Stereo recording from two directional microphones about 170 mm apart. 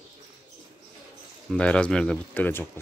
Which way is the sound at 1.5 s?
5° left (ahead or behind).